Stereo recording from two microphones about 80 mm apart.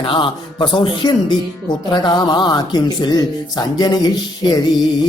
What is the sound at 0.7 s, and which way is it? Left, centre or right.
Speech, left.